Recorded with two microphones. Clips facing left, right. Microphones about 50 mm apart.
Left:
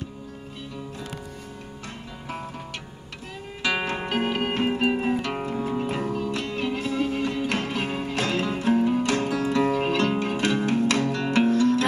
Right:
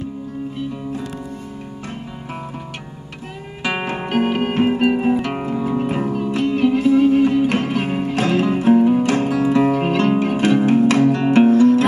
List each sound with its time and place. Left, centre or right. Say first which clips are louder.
3.6 s music: right 3 dB; right